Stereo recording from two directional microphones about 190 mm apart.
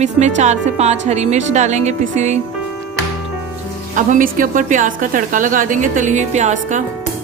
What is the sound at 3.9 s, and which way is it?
A woman's voice, 45° right (ahead or behind).